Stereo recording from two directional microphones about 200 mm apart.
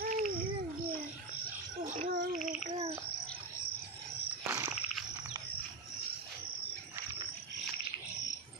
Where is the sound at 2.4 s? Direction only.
35° right (ahead or behind).